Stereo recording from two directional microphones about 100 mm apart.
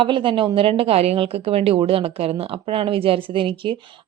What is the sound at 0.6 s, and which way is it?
A woman's voice, 70° right (ahead or behind).